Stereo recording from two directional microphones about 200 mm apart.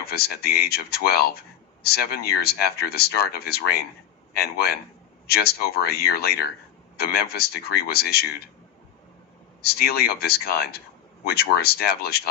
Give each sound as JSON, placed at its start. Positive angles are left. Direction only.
{"t": 0.0, "sound": "speech", "side_deg": 50}
{"t": 9.6, "sound": "speech", "side_deg": 50}